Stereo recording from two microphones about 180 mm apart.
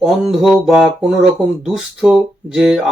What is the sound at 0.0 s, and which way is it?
Speech, centre (ahead or behind).